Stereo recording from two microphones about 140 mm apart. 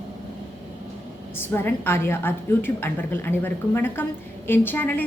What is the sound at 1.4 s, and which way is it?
A woman's voice, 15° left (ahead or behind).